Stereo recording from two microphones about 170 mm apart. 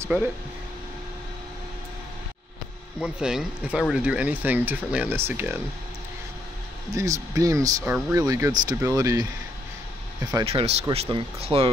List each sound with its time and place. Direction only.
3.0 s speech: 5° right (ahead or behind)
7.0 s speech: 20° right (ahead or behind)
10.4 s speech: 35° right (ahead or behind)